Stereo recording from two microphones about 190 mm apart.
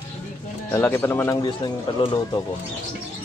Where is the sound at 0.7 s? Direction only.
15° left (ahead or behind).